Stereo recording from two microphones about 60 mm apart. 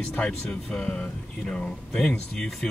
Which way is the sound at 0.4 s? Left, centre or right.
Centre.